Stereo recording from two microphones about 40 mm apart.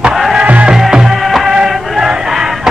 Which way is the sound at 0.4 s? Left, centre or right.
Right.